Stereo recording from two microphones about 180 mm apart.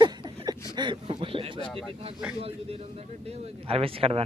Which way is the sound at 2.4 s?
35° right (ahead or behind).